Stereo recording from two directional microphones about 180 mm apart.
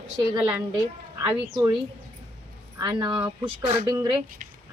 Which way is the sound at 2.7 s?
20° right (ahead or behind).